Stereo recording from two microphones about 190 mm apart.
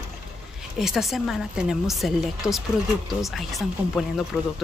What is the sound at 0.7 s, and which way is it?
A woman's voice, centre (ahead or behind).